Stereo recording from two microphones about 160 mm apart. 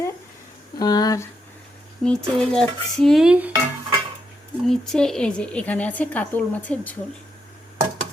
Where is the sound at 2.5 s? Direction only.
Centre (ahead or behind).